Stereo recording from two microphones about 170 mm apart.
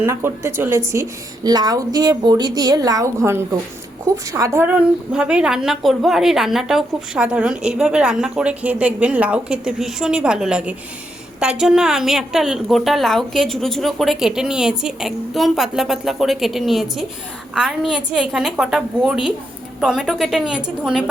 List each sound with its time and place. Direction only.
0.0 s a woman's voice: 15° right (ahead or behind)